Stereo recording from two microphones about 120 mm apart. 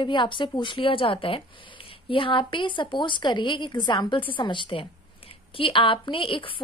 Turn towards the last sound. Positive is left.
turn(degrees=45)  # may be behind; listen again after turning